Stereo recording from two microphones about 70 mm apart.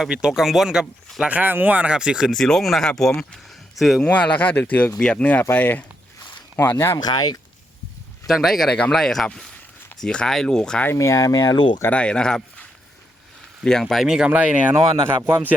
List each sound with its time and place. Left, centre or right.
0.0 s speech: centre
1.2 s speech: right
2.0 s speech: centre
2.3 s speech: centre
4.0 s speech: centre
6.9 s speech: left
8.3 s speech: centre
10.9 s speech: left
11.9 s speech: centre
13.7 s speech: centre
14.3 s speech: right